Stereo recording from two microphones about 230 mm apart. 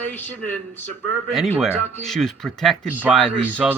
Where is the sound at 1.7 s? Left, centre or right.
Centre.